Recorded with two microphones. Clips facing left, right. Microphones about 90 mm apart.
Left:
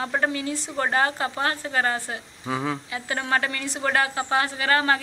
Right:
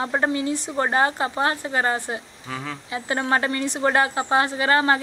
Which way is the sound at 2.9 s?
25° right (ahead or behind).